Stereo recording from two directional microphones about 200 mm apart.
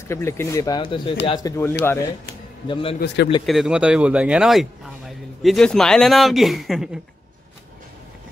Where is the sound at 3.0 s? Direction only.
55° left (ahead or behind).